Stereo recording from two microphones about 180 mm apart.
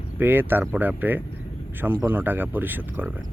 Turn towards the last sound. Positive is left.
turn(degrees=-10)  # may be behind; listen again after turning